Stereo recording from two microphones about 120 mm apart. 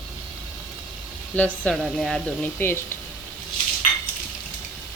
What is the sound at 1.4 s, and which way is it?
Speech, 10° left (ahead or behind).